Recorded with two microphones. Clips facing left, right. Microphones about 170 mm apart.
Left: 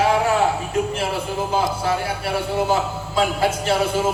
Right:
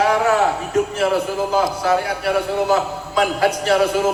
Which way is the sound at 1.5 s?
25° left (ahead or behind).